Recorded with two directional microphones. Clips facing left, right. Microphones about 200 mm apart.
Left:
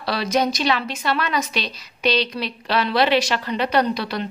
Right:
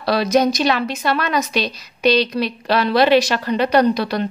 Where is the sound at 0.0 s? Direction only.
45° right (ahead or behind).